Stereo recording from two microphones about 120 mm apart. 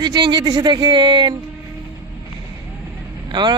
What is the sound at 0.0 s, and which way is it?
Speech, 35° right (ahead or behind).